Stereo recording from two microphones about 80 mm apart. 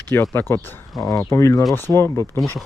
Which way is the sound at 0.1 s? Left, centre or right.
Left.